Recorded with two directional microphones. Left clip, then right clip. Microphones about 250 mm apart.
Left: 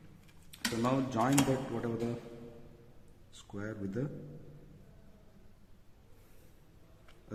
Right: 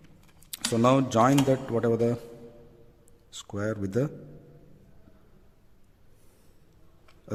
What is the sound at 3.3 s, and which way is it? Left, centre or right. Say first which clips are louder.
Speech: right 11 dB; right.